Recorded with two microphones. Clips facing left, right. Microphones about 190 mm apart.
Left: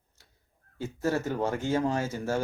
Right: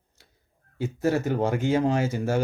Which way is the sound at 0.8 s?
15° right (ahead or behind).